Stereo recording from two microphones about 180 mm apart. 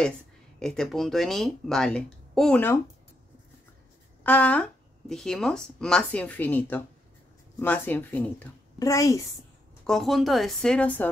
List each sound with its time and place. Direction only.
0.6 s speech: 5° left (ahead or behind)
4.2 s speech: 10° left (ahead or behind)
9.8 s speech: centre (ahead or behind)